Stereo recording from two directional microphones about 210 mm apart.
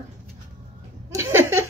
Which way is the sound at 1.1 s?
10° right (ahead or behind).